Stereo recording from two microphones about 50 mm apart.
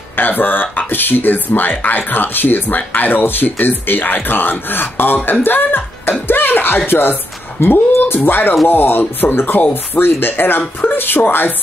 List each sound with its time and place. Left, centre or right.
0.1 s speech: left